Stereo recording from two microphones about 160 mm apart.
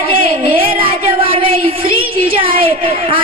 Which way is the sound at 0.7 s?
35° right (ahead or behind).